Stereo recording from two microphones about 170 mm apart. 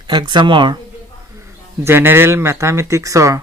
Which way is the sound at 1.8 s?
15° right (ahead or behind).